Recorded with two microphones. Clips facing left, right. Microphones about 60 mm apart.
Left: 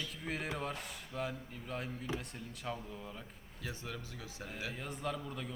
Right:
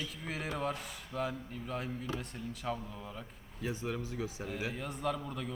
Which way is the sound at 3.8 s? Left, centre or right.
Right.